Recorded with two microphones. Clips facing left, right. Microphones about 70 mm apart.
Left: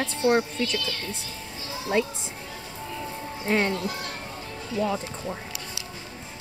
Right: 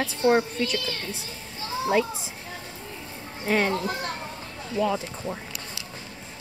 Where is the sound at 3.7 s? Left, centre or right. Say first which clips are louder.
Right 2 dB; right.